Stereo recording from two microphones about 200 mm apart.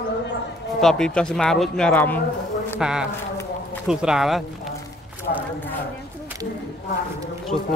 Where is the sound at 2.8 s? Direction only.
5° right (ahead or behind).